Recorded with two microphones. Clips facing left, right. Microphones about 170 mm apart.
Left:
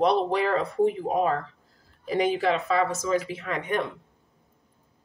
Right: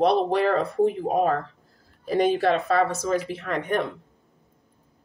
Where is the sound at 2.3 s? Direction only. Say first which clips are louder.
Right 3 dB; 60° right (ahead or behind).